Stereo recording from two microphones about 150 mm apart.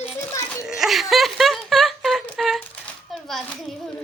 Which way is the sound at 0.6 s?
5° right (ahead or behind).